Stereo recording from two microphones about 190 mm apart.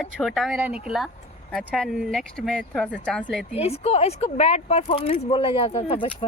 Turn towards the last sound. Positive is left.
turn(degrees=30)  # may be behind; listen again after turning